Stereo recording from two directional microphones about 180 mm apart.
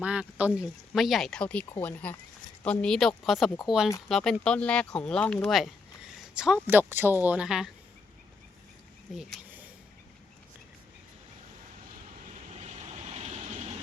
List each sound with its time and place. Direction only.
0.0 s speech: 5° right (ahead or behind)
9.1 s a sound: 5° right (ahead or behind)
12.5 s vehicle: 40° right (ahead or behind)